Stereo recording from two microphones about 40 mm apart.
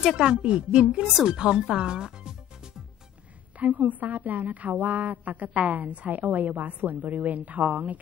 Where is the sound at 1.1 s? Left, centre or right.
Centre.